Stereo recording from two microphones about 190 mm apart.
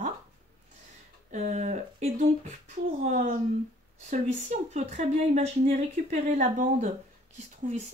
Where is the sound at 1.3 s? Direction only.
35° right (ahead or behind).